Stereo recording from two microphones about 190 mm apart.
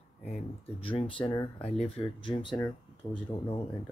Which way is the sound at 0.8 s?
30° left (ahead or behind).